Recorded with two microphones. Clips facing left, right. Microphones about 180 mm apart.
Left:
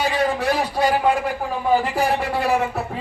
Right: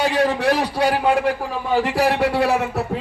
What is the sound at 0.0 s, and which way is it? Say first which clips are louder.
A man's voice: right 2 dB; 70° right (ahead or behind).